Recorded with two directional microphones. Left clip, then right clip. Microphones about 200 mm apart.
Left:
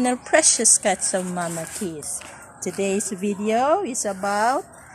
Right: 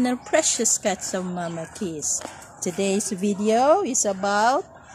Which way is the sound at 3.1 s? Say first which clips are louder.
Even; 35° right (ahead or behind).